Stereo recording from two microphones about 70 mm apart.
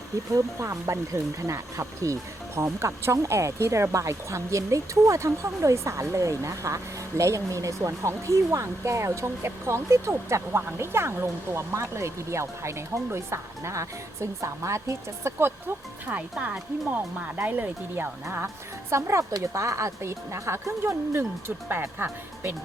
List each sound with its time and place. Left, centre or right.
0.3 s a woman's voice: right
18.4 s a woman's voice: right